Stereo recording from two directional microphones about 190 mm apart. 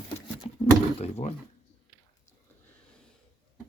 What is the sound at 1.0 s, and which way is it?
Speech, 35° left (ahead or behind).